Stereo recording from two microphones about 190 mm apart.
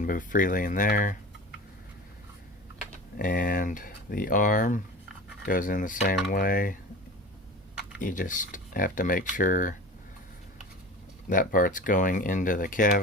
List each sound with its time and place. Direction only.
0.0 s speech: 45° left (ahead or behind)
3.2 s speech: 45° left (ahead or behind)
7.9 s speech: 45° left (ahead or behind)
11.3 s speech: 45° left (ahead or behind)